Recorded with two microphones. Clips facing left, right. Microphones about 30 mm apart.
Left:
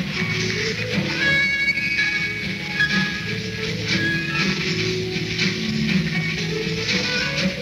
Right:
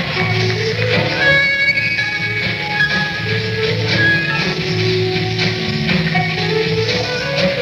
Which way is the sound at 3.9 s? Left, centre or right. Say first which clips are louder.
Right 8 dB; right.